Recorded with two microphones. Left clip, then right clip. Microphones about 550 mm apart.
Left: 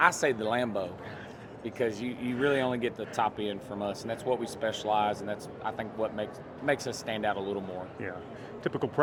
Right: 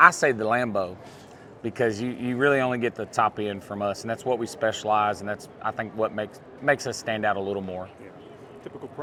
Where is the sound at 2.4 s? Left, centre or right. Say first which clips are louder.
Right 6 dB; right.